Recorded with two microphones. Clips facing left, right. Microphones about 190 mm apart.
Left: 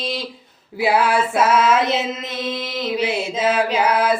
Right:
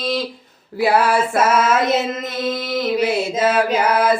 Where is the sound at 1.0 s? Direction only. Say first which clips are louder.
Right 1 dB; 45° right (ahead or behind).